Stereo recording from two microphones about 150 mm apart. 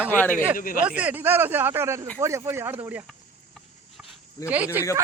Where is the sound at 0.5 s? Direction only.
70° left (ahead or behind).